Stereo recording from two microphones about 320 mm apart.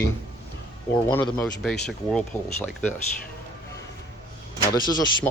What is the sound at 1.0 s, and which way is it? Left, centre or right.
Speech, centre.